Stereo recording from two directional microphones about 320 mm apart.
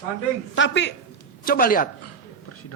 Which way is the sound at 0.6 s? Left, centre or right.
Left.